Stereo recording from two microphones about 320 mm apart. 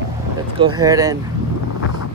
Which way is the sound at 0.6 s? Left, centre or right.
Centre.